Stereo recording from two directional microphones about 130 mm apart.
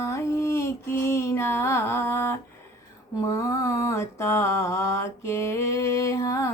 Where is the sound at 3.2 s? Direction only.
25° left (ahead or behind).